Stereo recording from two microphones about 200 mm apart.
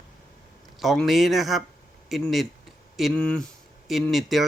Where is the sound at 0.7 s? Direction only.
Centre (ahead or behind).